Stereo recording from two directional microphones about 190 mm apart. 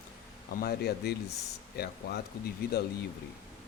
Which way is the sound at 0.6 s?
60° left (ahead or behind).